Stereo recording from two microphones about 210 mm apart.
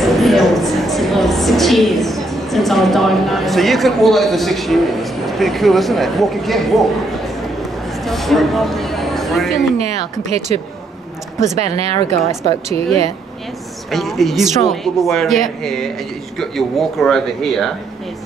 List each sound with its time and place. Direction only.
0.0 s a woman's voice: centre (ahead or behind)
8.0 s speech: centre (ahead or behind)
10.3 s speech: 30° right (ahead or behind)
13.8 s speech: centre (ahead or behind)